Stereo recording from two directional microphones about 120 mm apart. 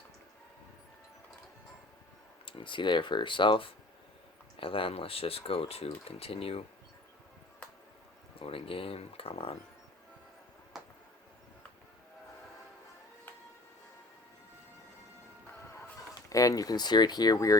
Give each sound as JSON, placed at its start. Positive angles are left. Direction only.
{"t": 2.5, "sound": "speech", "side_deg": 45}
{"t": 8.4, "sound": "speech", "side_deg": 50}
{"t": 16.0, "sound": "speech", "side_deg": 30}